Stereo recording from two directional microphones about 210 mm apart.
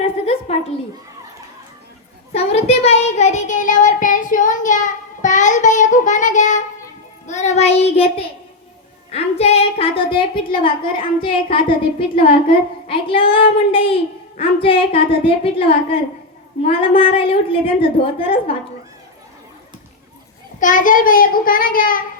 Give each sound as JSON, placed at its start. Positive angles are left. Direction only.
{"t": 2.3, "sound": "child singing", "side_deg": 30}
{"t": 9.0, "sound": "a woman's voice", "side_deg": 30}
{"t": 20.6, "sound": "child singing", "side_deg": 40}